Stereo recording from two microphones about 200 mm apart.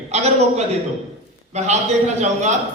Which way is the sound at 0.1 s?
35° right (ahead or behind).